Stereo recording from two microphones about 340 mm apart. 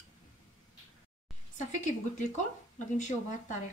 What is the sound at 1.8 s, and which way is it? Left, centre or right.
Speech, left.